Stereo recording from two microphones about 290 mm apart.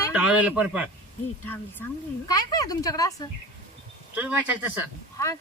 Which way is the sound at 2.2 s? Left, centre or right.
Centre.